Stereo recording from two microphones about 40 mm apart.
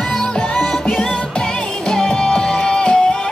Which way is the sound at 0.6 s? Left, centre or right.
Centre.